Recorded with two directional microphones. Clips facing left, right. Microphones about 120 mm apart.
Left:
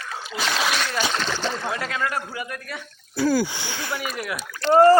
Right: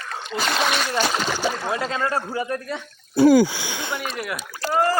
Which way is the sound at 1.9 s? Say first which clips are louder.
Right 3 dB; 30° right (ahead or behind).